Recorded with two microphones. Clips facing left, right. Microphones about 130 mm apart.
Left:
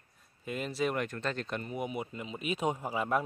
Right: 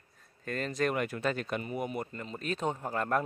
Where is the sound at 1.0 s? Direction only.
10° right (ahead or behind).